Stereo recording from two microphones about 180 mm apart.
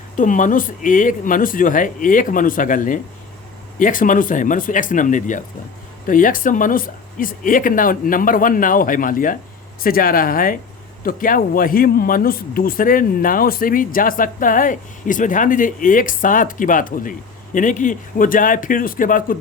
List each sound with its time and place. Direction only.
0.2 s speech: 45° left (ahead or behind)